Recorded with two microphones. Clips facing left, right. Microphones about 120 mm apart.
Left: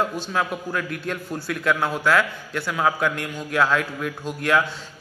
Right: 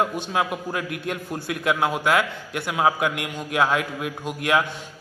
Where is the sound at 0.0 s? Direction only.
20° right (ahead or behind).